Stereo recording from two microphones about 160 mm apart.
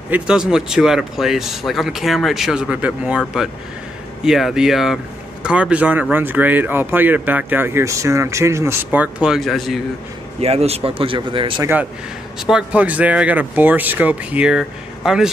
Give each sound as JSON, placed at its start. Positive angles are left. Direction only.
{"t": 0.1, "sound": "speech", "side_deg": -5}
{"t": 4.2, "sound": "speech", "side_deg": 0}
{"t": 10.4, "sound": "speech", "side_deg": -40}
{"t": 11.6, "sound": "speech", "side_deg": -10}